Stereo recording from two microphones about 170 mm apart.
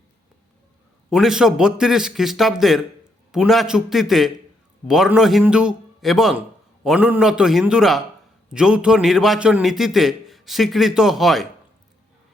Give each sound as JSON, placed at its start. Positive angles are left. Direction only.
{"t": 1.1, "sound": "a man's voice", "side_deg": -5}